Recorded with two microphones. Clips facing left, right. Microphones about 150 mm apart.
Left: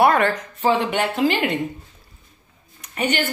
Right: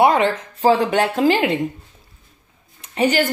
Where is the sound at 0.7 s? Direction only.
40° right (ahead or behind).